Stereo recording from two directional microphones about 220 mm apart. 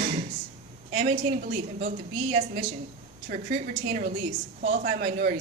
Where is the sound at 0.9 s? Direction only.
30° right (ahead or behind).